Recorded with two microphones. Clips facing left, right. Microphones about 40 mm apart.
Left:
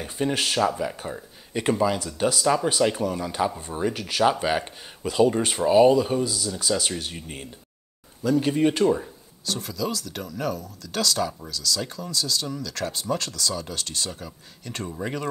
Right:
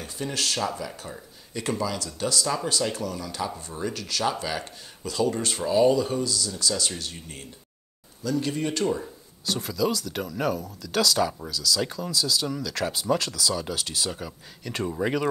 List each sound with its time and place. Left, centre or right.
0.0 s speech: left
9.5 s speech: centre